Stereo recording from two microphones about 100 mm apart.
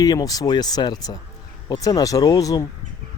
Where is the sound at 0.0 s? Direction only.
40° left (ahead or behind).